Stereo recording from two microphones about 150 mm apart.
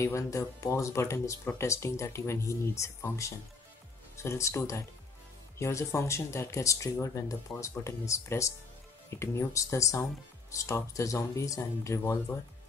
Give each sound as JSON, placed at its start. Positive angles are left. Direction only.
{"t": 0.0, "sound": "speech", "side_deg": 20}